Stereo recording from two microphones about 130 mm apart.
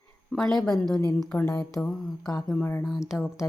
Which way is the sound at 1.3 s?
25° left (ahead or behind).